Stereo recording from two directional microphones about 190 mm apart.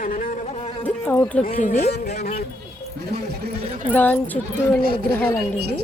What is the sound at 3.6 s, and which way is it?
Speech, 35° right (ahead or behind).